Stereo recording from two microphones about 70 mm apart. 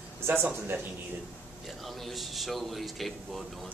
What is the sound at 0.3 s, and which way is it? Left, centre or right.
Speech, right.